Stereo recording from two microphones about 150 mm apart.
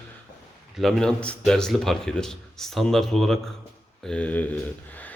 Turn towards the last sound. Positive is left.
turn(degrees=10)  # may be behind; listen again after turning